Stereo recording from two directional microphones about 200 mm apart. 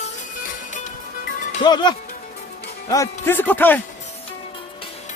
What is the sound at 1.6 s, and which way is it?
Speech, 20° left (ahead or behind).